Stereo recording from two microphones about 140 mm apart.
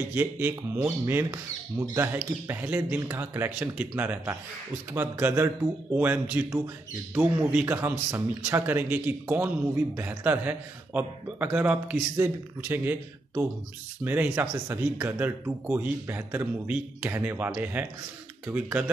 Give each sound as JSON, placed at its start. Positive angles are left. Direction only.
{"t": 0.1, "sound": "a man's voice", "side_deg": -15}